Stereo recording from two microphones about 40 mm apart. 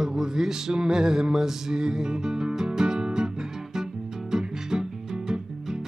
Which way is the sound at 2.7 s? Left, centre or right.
Centre.